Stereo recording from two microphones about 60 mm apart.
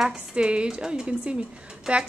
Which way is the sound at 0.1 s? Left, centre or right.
Centre.